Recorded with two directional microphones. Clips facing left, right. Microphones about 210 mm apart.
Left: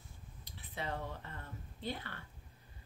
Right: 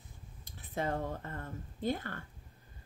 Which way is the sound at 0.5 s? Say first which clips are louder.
Right 7 dB; 45° right (ahead or behind).